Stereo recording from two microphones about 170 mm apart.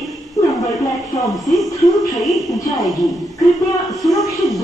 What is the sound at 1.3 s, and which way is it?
A woman's voice, centre (ahead or behind).